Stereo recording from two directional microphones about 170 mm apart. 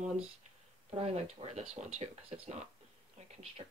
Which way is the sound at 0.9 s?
40° right (ahead or behind).